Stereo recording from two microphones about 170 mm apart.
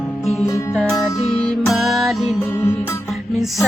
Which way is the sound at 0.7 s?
Centre (ahead or behind).